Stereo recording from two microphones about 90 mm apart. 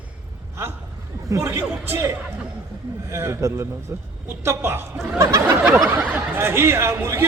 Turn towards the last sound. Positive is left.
turn(degrees=-30)  # may be behind; listen again after turning